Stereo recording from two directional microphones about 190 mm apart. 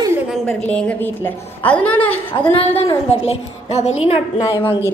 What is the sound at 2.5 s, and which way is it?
A woman's voice, 30° left (ahead or behind).